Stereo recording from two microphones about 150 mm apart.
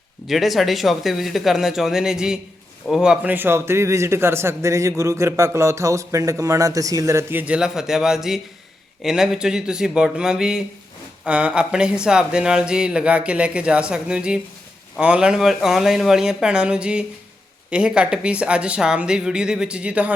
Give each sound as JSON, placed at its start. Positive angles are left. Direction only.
{"t": 0.3, "sound": "speech", "side_deg": 0}